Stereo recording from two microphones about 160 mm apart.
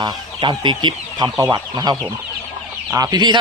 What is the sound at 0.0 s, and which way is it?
Speech, 30° right (ahead or behind).